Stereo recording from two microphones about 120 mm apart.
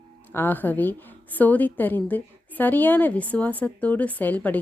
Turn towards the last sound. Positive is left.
turn(degrees=15)  # may be behind; listen again after turning